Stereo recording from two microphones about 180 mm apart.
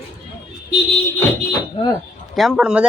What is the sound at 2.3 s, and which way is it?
Speech, centre (ahead or behind).